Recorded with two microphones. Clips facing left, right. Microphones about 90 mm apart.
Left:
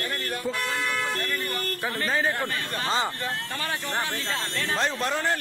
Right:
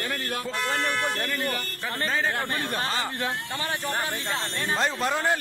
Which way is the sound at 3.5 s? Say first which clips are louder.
Right 1 dB; 20° right (ahead or behind).